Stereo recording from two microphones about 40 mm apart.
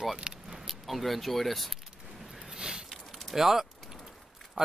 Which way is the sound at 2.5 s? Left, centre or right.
Centre.